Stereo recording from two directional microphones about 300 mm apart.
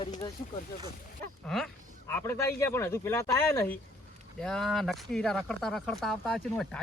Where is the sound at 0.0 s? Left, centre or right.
Centre.